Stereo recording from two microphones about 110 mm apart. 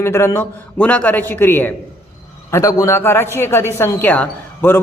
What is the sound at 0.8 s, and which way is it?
A man's voice, 10° left (ahead or behind).